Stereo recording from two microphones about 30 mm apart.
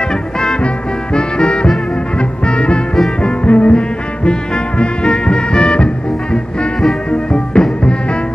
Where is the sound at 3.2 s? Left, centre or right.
Left.